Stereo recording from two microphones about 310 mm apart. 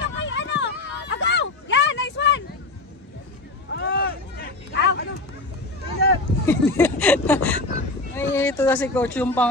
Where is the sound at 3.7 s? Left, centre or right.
Left.